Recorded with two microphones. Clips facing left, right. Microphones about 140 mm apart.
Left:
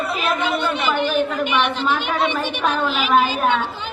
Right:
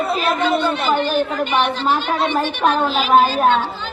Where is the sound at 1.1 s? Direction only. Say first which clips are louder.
Right 1 dB; 40° right (ahead or behind).